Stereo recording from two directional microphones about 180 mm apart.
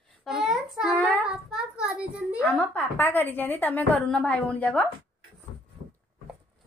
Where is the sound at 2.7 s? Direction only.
10° left (ahead or behind).